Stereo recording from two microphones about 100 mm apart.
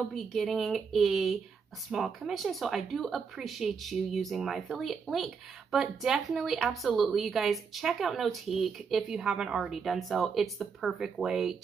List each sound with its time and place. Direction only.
0.1 s a woman's voice: 5° left (ahead or behind)